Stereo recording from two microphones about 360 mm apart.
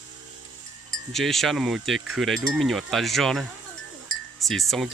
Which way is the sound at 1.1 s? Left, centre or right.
Centre.